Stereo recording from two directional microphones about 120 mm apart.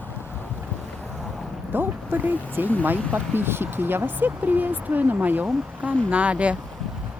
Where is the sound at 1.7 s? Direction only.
15° right (ahead or behind).